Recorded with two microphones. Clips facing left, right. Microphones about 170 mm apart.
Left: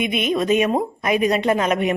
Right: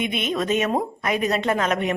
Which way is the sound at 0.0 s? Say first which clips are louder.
Left 4 dB; 10° left (ahead or behind).